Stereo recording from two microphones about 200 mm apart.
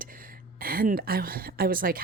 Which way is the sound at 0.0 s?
45° right (ahead or behind).